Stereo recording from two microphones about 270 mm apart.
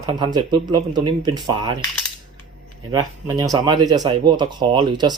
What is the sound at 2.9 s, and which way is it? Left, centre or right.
Speech, centre.